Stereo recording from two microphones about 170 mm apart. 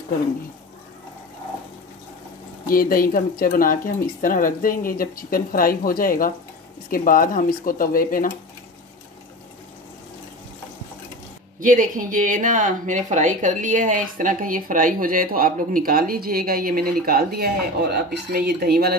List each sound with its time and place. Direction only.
2.6 s speech: 60° left (ahead or behind)
11.6 s speech: 50° right (ahead or behind)